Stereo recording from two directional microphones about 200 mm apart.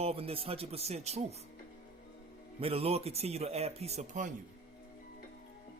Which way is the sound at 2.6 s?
30° right (ahead or behind).